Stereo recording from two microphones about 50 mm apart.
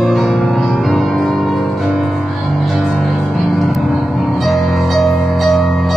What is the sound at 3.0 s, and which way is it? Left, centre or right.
Music, centre.